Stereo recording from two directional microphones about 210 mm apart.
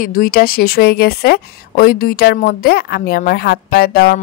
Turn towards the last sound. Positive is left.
turn(degrees=45)  # may be behind; listen again after turning